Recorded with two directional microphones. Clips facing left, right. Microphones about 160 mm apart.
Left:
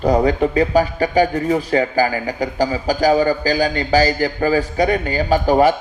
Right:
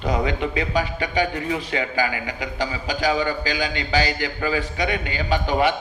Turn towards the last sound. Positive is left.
turn(degrees=40)  # may be behind; listen again after turning